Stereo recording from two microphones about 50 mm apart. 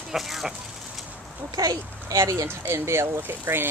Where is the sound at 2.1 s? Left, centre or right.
Right.